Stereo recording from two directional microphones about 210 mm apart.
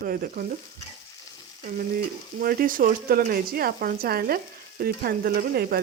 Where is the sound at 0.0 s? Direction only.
45° right (ahead or behind).